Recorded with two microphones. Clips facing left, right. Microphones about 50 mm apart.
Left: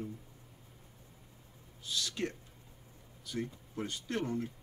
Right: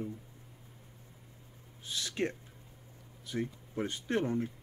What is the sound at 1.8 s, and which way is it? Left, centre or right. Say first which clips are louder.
Speech: right 2 dB; right.